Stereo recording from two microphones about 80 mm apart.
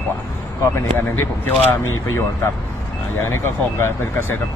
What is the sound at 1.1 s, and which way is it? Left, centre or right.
Speech, left.